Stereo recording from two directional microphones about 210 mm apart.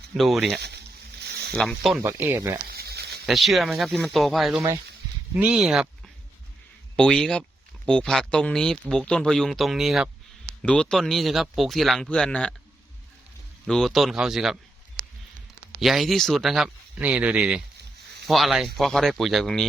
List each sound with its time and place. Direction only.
0.2 s speech: centre (ahead or behind)
1.2 s a sound: 50° right (ahead or behind)
1.5 s speech: centre (ahead or behind)
2.0 s speech: 10° right (ahead or behind)
2.6 s a sound: 50° right (ahead or behind)
3.2 s speech: centre (ahead or behind)
6.9 s speech: 5° left (ahead or behind)
13.7 s speech: centre (ahead or behind)
15.8 s speech: centre (ahead or behind)